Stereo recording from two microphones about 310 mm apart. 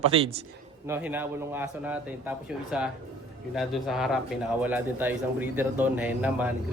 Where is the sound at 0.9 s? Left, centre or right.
Centre.